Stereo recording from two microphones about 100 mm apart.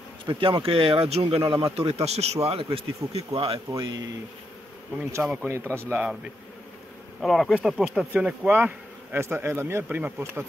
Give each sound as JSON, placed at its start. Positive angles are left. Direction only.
{"t": 0.3, "sound": "speech", "side_deg": -55}
{"t": 1.8, "sound": "speech", "side_deg": -90}
{"t": 3.3, "sound": "speech", "side_deg": -65}
{"t": 3.8, "sound": "speech", "side_deg": -45}
{"t": 5.4, "sound": "speech", "side_deg": -20}
{"t": 7.2, "sound": "speech", "side_deg": 0}
{"t": 8.1, "sound": "speech", "side_deg": -15}